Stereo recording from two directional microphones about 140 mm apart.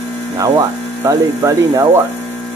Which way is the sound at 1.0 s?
20° right (ahead or behind).